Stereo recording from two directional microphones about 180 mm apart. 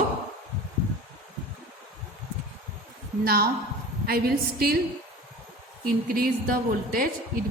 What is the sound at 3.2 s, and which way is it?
A woman's voice, 60° right (ahead or behind).